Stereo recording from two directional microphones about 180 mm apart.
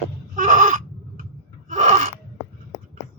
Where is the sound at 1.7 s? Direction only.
40° right (ahead or behind).